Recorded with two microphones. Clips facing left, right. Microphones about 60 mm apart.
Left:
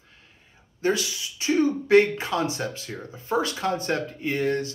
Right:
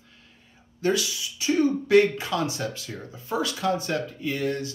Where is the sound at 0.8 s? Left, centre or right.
Left.